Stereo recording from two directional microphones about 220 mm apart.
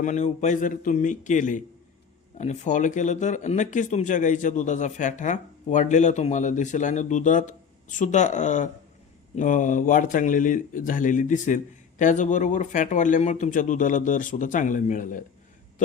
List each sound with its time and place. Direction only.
0.0 s speech: 35° left (ahead or behind)